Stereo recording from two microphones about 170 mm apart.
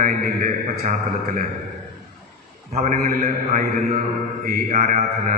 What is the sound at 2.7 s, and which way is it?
Speech, 45° right (ahead or behind).